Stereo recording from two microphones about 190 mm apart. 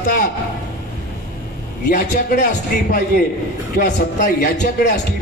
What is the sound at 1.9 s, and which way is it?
A man's voice, 45° left (ahead or behind).